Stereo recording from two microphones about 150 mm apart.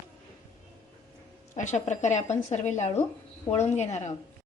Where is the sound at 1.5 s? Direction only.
50° left (ahead or behind).